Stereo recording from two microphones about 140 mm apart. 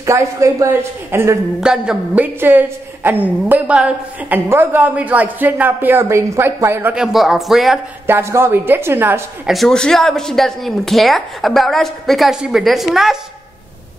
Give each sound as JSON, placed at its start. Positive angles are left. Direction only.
{"t": 0.0, "sound": "a woman's voice", "side_deg": -20}
{"t": 1.6, "sound": "a woman's voice", "side_deg": -5}
{"t": 7.0, "sound": "speech", "side_deg": 0}
{"t": 8.1, "sound": "a woman's voice", "side_deg": -20}
{"t": 9.5, "sound": "speech", "side_deg": 0}